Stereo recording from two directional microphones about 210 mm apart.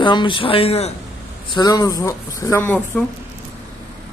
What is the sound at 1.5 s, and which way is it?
Speech, 20° left (ahead or behind).